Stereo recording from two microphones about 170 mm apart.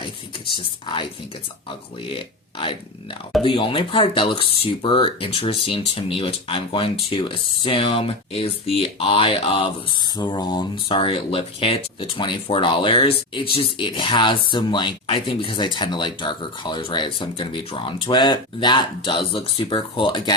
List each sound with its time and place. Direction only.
0.5 s speech: 30° left (ahead or behind)
3.4 s speech: 30° left (ahead or behind)